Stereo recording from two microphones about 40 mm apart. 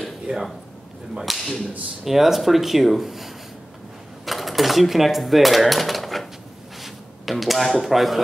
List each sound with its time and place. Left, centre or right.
0.3 s speech: right
1.2 s speech: centre
4.3 s a sound: centre
6.8 s speech: centre